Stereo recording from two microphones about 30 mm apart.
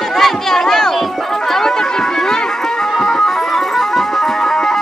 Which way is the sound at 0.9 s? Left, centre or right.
Centre.